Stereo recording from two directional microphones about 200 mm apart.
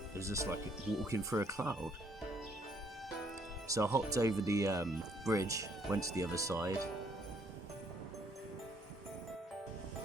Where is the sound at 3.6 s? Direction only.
15° right (ahead or behind).